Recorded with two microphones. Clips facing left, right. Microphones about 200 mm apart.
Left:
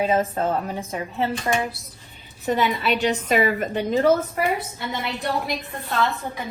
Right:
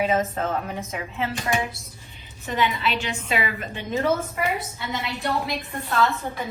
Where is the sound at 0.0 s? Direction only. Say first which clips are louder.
Left 2 dB; 30° left (ahead or behind).